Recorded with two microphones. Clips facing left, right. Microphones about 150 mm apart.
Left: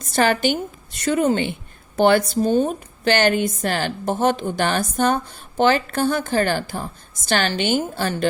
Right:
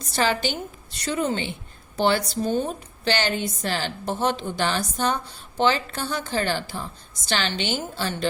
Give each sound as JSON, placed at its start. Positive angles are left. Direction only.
{"t": 0.0, "sound": "a woman's voice", "side_deg": 50}